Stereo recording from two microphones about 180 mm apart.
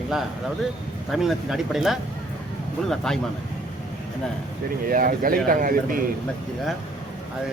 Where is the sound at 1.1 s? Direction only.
Centre (ahead or behind).